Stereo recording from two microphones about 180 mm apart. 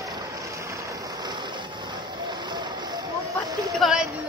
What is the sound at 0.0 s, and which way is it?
Vehicle, 20° right (ahead or behind).